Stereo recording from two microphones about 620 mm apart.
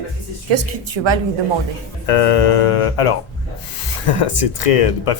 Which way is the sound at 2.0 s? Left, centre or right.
Left.